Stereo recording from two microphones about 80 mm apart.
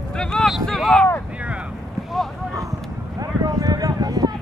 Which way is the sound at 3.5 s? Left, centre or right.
Right.